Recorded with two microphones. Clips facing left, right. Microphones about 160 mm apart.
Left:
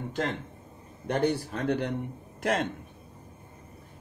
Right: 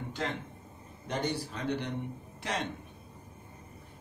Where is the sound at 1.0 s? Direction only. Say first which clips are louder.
Left 7 dB; 60° left (ahead or behind).